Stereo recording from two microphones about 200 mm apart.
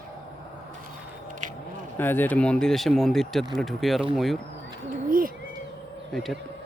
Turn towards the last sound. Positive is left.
turn(degrees=0)  # may be behind; listen again after turning